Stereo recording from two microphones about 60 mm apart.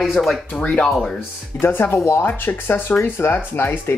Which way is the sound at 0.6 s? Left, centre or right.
Left.